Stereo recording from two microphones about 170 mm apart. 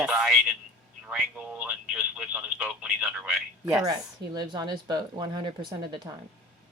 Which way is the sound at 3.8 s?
25° right (ahead or behind).